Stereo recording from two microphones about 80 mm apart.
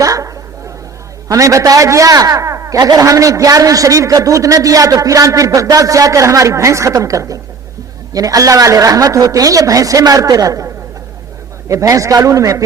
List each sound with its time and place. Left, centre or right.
0.0 s a sound: right
1.3 s a man's voice: right
11.7 s a man's voice: right